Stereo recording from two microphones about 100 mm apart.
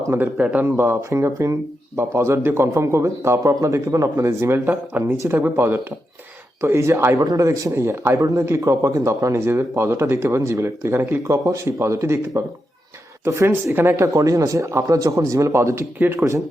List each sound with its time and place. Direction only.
0.1 s a man's voice: 15° right (ahead or behind)
5.1 s a man's voice: 30° right (ahead or behind)